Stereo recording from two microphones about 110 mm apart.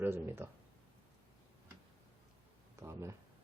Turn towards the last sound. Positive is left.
turn(degrees=-25)  # may be behind; listen again after turning